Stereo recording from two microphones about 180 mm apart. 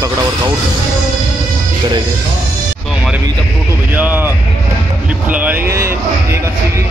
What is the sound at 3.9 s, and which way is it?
Speech, 10° right (ahead or behind).